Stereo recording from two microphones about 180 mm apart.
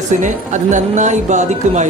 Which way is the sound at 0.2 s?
45° right (ahead or behind).